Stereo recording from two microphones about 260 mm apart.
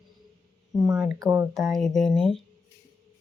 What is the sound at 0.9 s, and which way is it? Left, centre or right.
Speech, centre.